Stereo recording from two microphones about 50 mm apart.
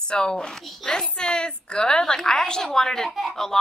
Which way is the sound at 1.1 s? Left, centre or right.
Centre.